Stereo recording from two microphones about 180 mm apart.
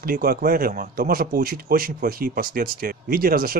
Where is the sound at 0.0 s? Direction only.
55° right (ahead or behind).